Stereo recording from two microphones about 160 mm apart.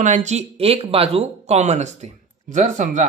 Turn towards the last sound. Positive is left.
turn(degrees=-50)  # may be behind; listen again after turning